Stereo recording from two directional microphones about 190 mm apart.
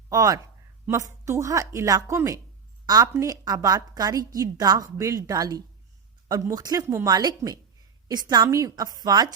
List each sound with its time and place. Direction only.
0.1 s a woman's voice: 20° right (ahead or behind)